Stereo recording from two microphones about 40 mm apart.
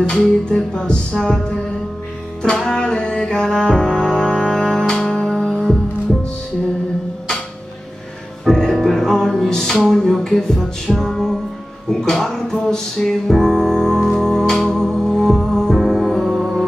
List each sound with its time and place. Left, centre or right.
0.1 s music: centre
8.5 s music: centre